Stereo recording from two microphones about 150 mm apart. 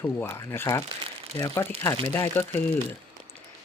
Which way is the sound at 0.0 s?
15° left (ahead or behind).